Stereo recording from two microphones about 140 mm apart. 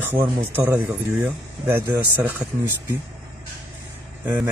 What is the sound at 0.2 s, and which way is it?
Speech, 15° right (ahead or behind).